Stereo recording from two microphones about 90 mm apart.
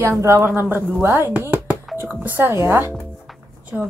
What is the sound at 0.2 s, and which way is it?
Speech, 30° right (ahead or behind).